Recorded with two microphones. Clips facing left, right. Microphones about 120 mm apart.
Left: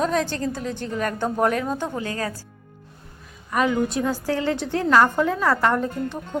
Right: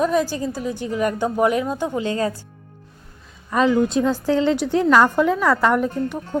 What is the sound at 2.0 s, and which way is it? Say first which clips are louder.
Speech: right 6 dB; 25° right (ahead or behind).